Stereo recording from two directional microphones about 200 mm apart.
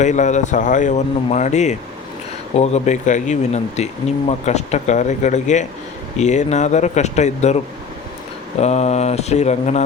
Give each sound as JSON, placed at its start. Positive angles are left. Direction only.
{"t": 0.0, "sound": "speech", "side_deg": 35}